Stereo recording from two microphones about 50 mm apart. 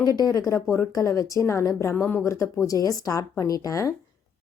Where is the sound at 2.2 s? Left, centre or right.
Left.